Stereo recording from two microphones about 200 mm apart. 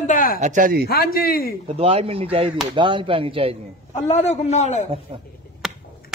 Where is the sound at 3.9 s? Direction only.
35° left (ahead or behind).